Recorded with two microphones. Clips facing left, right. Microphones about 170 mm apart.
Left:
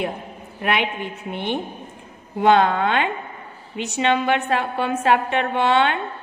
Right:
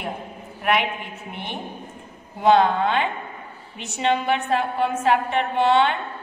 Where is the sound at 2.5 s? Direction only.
75° left (ahead or behind).